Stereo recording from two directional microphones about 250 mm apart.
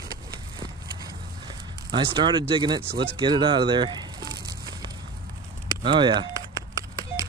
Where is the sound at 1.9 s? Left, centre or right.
Centre.